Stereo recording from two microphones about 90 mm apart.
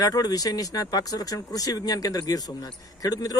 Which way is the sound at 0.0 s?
45° left (ahead or behind).